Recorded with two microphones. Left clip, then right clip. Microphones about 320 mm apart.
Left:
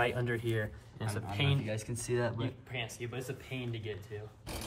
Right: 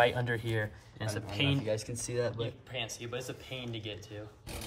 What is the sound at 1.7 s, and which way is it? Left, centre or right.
Speech, centre.